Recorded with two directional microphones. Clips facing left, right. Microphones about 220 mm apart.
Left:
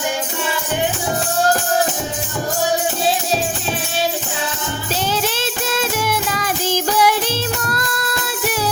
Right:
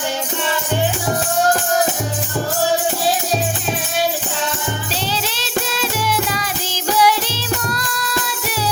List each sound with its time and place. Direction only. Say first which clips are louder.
5.1 s music: left 2 dB; 50° left (ahead or behind)